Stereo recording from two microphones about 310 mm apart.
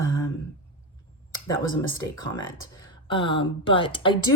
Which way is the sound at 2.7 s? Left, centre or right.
Centre.